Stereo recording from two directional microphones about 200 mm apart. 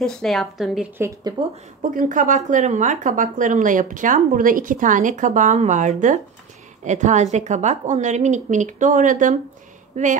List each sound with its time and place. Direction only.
0.0 s speech: 5° left (ahead or behind)
1.8 s speech: 40° right (ahead or behind)